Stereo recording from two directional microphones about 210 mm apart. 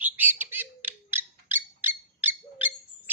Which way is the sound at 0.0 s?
10° right (ahead or behind).